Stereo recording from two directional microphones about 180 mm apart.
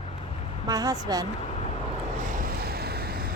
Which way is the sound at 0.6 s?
20° right (ahead or behind).